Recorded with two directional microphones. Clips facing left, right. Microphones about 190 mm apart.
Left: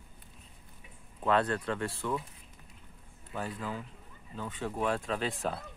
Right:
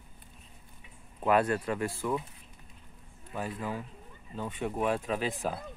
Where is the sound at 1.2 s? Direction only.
10° right (ahead or behind).